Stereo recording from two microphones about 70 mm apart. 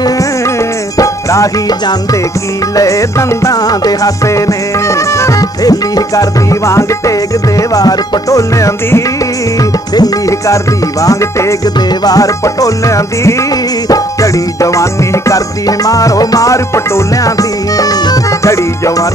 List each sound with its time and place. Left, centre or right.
0.9 s music: left
4.3 s music: left
5.6 s music: left
9.6 s music: left
12.0 s music: left
18.5 s music: left